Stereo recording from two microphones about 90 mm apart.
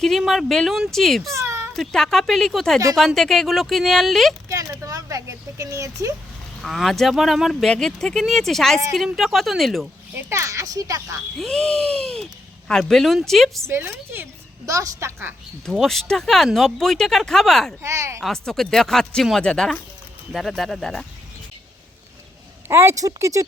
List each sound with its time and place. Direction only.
0.0 s speech: centre (ahead or behind)
1.3 s a sound: 30° right (ahead or behind)
1.7 s speech: 5° left (ahead or behind)
4.4 s speech: 35° right (ahead or behind)
6.6 s speech: centre (ahead or behind)
10.2 s speech: 30° right (ahead or behind)
11.3 s speech: centre (ahead or behind)
13.7 s speech: 25° right (ahead or behind)
14.7 s speech: 35° right (ahead or behind)
15.6 s speech: 5° left (ahead or behind)
17.8 s speech: 30° right (ahead or behind)
18.2 s speech: 5° left (ahead or behind)
22.7 s speech: 30° right (ahead or behind)